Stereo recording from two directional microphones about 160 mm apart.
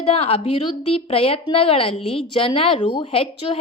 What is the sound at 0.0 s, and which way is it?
A woman's voice, 35° left (ahead or behind).